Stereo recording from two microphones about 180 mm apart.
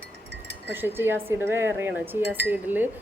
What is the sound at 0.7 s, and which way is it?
Speech, 10° right (ahead or behind).